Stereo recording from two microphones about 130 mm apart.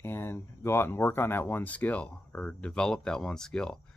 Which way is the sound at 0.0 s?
15° left (ahead or behind).